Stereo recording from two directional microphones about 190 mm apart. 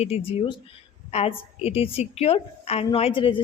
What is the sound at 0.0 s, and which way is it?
Speech, 30° left (ahead or behind).